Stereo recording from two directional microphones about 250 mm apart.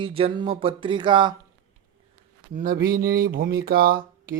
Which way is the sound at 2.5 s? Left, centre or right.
Right.